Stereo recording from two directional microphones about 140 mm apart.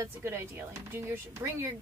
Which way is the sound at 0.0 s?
15° right (ahead or behind).